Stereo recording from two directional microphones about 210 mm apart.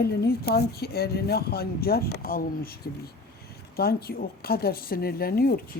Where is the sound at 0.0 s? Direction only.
45° left (ahead or behind).